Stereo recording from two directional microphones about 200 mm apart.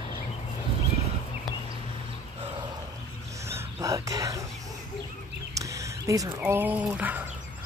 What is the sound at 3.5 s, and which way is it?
Whispering, 15° right (ahead or behind).